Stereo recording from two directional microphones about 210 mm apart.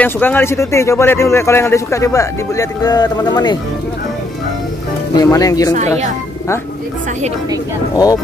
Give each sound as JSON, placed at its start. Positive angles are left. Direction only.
{"t": 0.0, "sound": "a man's voice", "side_deg": 10}
{"t": 5.1, "sound": "a man's voice", "side_deg": 15}
{"t": 7.9, "sound": "a man's voice", "side_deg": 15}